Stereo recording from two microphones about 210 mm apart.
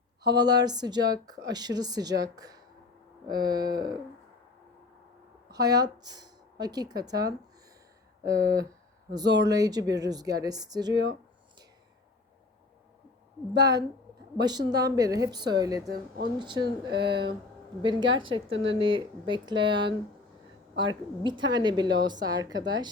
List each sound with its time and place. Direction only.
0.3 s a woman's voice: 20° right (ahead or behind)
5.5 s speech: 15° right (ahead or behind)
14.3 s a woman's voice: 20° right (ahead or behind)
15.9 s speech: 50° right (ahead or behind)
16.4 s a woman's voice: 20° right (ahead or behind)
18.5 s speech: 60° right (ahead or behind)
18.8 s a woman's voice: 25° right (ahead or behind)